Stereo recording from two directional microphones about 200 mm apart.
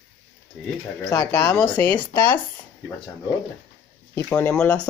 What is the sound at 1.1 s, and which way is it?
Speech, 15° left (ahead or behind).